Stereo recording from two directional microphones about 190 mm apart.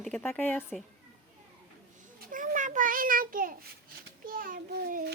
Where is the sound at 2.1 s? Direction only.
45° right (ahead or behind).